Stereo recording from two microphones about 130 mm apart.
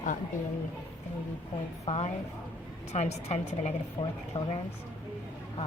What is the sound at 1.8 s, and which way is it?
A woman's voice, 55° left (ahead or behind).